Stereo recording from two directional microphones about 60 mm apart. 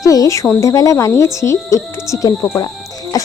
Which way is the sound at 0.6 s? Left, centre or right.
Left.